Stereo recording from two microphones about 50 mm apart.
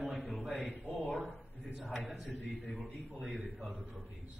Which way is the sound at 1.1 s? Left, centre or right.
Centre.